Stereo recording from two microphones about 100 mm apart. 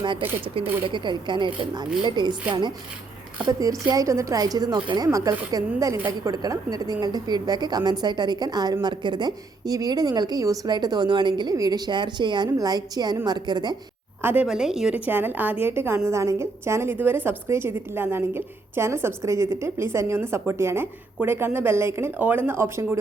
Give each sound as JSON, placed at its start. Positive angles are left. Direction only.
{"t": 0.4, "sound": "speech", "side_deg": -65}
{"t": 0.9, "sound": "a woman's voice", "side_deg": -50}
{"t": 3.6, "sound": "a woman's voice", "side_deg": -35}
{"t": 14.2, "sound": "a woman's voice", "side_deg": -20}
{"t": 14.4, "sound": "a woman's voice", "side_deg": -5}